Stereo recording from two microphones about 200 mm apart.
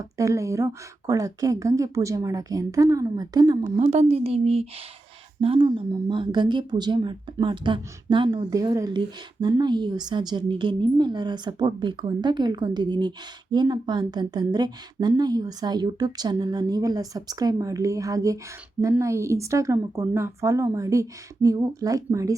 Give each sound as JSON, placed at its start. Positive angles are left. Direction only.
{"t": 0.0, "sound": "speech", "side_deg": -15}
{"t": 3.6, "sound": "speech", "side_deg": -35}